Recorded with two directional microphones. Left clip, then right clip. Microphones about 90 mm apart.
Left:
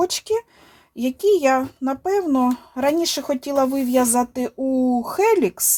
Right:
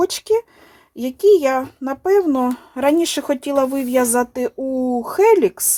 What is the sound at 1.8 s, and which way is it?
A woman's voice, 30° right (ahead or behind).